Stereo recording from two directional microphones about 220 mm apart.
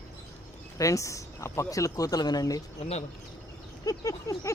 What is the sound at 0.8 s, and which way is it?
Speech, 15° left (ahead or behind).